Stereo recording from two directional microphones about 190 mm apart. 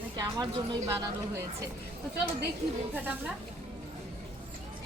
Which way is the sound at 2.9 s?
10° right (ahead or behind).